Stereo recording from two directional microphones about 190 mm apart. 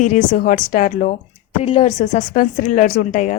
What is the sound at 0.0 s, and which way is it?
A woman's voice, 45° left (ahead or behind).